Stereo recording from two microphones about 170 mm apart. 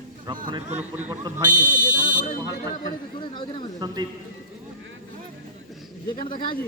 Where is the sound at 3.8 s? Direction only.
25° right (ahead or behind).